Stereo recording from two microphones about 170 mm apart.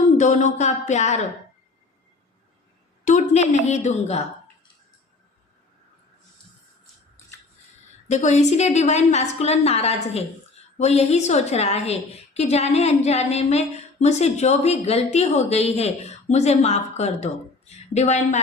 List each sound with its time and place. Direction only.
0.2 s a woman's voice: 45° left (ahead or behind)
3.0 s a woman's voice: 45° left (ahead or behind)
8.0 s a woman's voice: 45° left (ahead or behind)